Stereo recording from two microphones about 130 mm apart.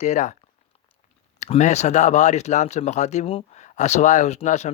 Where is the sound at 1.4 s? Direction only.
65° left (ahead or behind).